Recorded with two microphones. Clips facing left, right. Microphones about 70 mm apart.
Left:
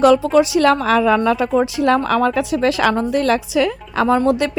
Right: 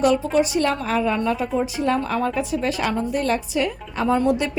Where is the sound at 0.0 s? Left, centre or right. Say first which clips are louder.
Left 6 dB; left.